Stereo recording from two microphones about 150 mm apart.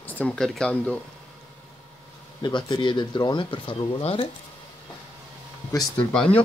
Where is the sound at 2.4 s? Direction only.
30° left (ahead or behind).